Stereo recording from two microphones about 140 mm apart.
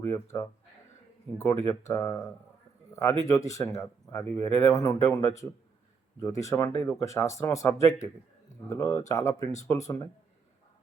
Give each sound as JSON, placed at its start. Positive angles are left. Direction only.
{"t": 0.1, "sound": "speech", "side_deg": 20}